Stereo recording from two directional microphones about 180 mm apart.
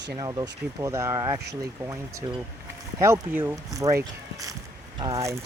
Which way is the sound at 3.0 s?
15° right (ahead or behind).